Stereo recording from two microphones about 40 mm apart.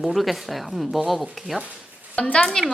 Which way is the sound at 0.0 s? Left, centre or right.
Centre.